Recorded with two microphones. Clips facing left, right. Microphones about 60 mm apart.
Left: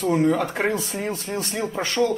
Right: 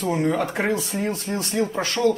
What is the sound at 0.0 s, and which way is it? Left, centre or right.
A woman's voice, centre.